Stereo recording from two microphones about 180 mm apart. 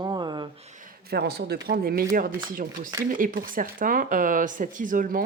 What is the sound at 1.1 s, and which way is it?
Speech, 65° right (ahead or behind).